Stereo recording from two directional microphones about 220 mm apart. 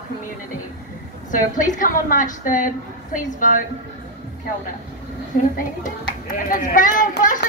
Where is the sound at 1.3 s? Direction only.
35° left (ahead or behind).